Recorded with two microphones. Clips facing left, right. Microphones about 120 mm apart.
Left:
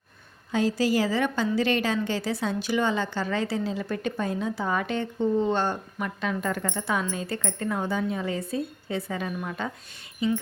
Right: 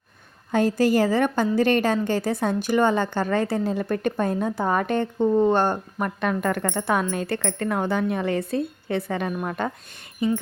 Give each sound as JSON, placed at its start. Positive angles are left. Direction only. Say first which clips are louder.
{"t": 0.5, "sound": "a woman's voice", "louder": "right 4 dB", "side_deg": -50}